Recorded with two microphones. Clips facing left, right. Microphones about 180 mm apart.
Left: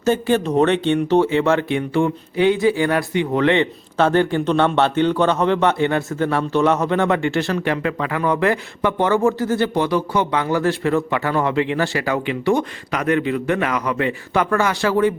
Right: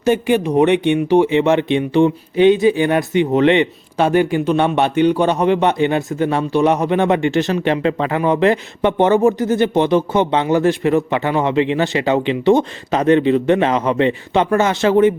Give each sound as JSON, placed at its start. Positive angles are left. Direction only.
{"t": 0.0, "sound": "speech", "side_deg": -15}